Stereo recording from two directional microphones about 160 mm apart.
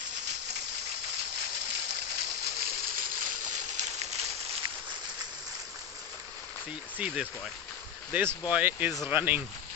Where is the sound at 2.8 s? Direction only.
55° right (ahead or behind).